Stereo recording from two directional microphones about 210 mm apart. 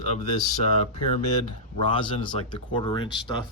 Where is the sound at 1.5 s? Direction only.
25° left (ahead or behind).